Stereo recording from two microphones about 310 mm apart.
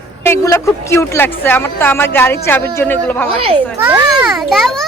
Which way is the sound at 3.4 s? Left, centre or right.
Centre.